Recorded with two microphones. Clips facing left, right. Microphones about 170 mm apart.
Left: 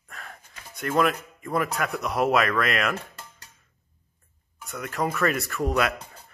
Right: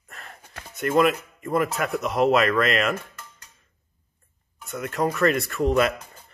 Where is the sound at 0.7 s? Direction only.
Centre (ahead or behind).